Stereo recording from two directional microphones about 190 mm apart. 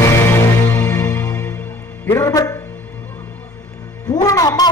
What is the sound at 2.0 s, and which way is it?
Speech, 15° left (ahead or behind).